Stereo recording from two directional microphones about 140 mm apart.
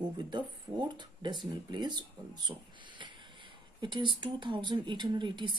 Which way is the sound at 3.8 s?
35° right (ahead or behind).